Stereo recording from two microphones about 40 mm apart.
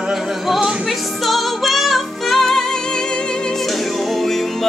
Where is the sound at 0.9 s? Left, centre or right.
Centre.